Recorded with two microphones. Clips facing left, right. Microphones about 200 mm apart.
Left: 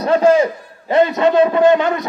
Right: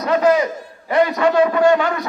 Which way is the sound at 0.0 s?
30° left (ahead or behind).